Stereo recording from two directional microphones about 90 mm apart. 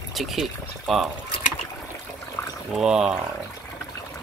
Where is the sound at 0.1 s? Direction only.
Centre (ahead or behind).